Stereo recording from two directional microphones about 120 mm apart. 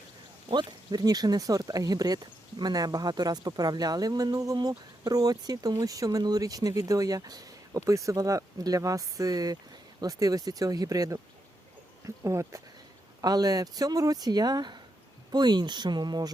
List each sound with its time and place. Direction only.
0.4 s speech: 35° right (ahead or behind)